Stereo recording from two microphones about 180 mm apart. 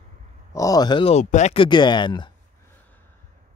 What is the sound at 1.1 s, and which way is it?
Speech, 40° left (ahead or behind).